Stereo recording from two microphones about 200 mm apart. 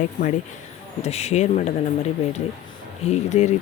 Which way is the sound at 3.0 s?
35° left (ahead or behind).